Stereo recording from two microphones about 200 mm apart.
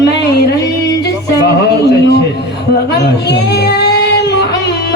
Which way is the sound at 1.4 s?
55° left (ahead or behind).